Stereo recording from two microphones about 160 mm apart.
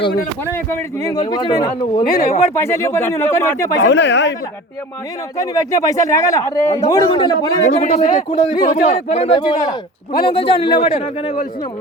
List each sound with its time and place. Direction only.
0.5 s a man's voice: 15° left (ahead or behind)
2.2 s speech: 45° left (ahead or behind)
2.6 s speech: 15° left (ahead or behind)
3.8 s speech: 90° left
5.5 s a man's voice: 20° left (ahead or behind)
7.6 s speech: 45° left (ahead or behind)
8.3 s a man's voice: 30° left (ahead or behind)
8.6 s a man's voice: 50° left (ahead or behind)